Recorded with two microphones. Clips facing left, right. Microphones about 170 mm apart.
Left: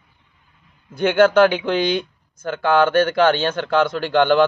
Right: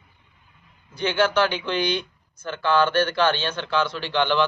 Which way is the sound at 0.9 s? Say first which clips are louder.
Left 8 dB; 50° left (ahead or behind).